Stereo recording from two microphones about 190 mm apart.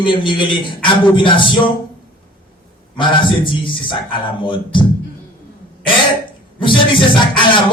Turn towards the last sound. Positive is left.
turn(degrees=25)  # may be behind; listen again after turning